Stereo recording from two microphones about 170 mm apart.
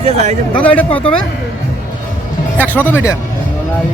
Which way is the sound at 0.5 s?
10° left (ahead or behind).